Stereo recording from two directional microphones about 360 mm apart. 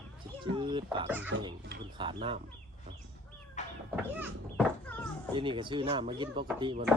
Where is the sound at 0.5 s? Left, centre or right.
Centre.